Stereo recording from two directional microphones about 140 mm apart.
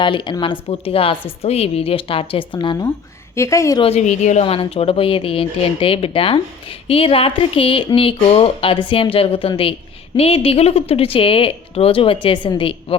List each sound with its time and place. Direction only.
0.0 s speech: 35° left (ahead or behind)
3.3 s a woman's voice: 20° left (ahead or behind)
3.8 s a woman's voice: 45° left (ahead or behind)
4.4 s speech: 40° left (ahead or behind)